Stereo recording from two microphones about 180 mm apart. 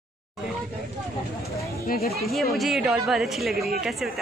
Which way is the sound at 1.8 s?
55° left (ahead or behind).